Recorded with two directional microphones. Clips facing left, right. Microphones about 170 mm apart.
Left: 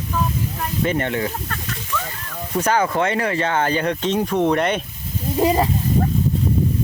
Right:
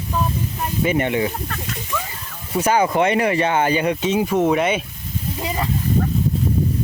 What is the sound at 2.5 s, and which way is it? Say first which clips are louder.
Speech: right 2 dB; 10° right (ahead or behind).